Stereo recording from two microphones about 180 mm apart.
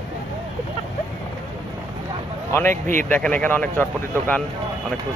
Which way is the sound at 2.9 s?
10° left (ahead or behind).